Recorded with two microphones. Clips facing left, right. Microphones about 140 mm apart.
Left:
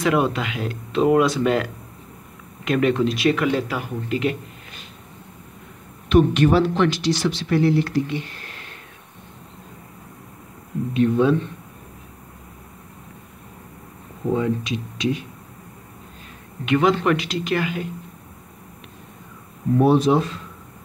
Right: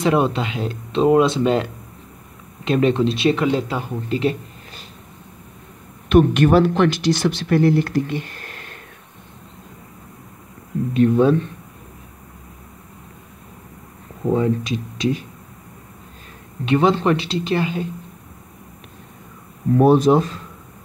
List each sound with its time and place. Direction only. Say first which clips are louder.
0.0 s speech: right 2 dB; 25° right (ahead or behind)
6.0 s speech: right 2 dB; 55° right (ahead or behind)
10.9 s speech: right 3 dB; 40° right (ahead or behind)
14.3 s speech: right 3 dB; 35° right (ahead or behind)
16.6 s speech: right 2 dB; 30° right (ahead or behind)
19.8 s speech: right 3 dB; 45° right (ahead or behind)